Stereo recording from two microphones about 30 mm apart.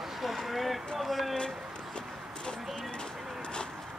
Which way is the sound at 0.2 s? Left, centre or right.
Centre.